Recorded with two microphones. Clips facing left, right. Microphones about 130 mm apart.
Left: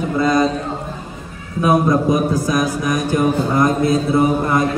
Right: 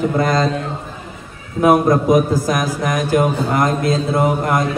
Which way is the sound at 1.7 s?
55° right (ahead or behind).